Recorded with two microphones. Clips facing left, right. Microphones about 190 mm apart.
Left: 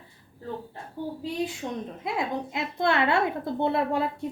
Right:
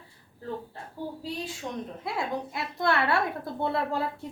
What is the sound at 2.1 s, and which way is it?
A woman's voice, 20° left (ahead or behind).